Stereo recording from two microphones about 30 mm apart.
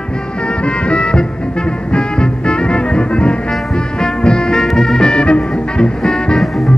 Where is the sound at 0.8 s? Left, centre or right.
Left.